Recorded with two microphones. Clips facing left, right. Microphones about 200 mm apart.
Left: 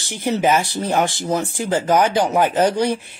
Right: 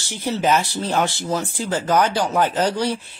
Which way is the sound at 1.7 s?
10° left (ahead or behind).